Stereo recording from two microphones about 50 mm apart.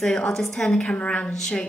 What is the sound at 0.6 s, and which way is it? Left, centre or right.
A woman's voice, left.